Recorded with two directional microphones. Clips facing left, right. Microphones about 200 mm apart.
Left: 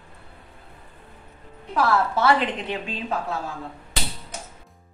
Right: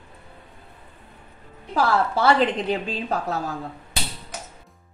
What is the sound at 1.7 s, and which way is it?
A woman's voice, 30° right (ahead or behind).